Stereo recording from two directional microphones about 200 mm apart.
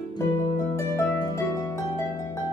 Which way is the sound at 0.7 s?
15° left (ahead or behind).